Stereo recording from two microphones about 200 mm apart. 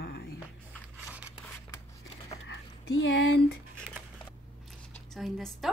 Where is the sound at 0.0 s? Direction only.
55° left (ahead or behind).